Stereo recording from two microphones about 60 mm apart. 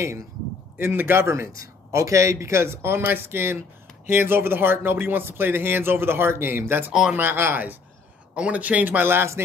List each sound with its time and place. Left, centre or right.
0.7 s a man's voice: right
6.9 s speech: centre
7.2 s speech: right
8.4 s speech: right